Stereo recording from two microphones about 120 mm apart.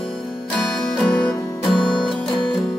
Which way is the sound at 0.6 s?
Centre (ahead or behind).